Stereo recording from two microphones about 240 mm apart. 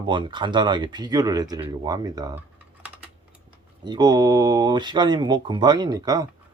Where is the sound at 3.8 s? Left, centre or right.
Centre.